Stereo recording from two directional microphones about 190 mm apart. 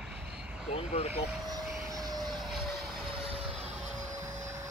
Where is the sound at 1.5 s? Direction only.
20° right (ahead or behind).